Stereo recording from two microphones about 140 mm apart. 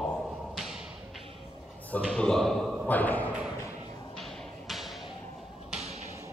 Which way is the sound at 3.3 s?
5° right (ahead or behind).